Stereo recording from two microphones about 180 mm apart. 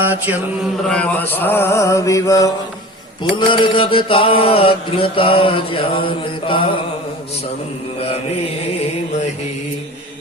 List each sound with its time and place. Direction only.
0.0 s mantra: 10° right (ahead or behind)
0.9 s mantra: 5° left (ahead or behind)
3.3 s mantra: 30° left (ahead or behind)
7.9 s mantra: 35° left (ahead or behind)